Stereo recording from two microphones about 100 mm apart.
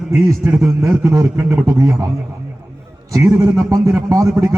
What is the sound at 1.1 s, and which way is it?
Speech, 35° right (ahead or behind).